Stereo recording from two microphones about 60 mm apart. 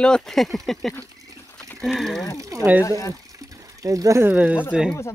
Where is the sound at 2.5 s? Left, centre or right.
Right.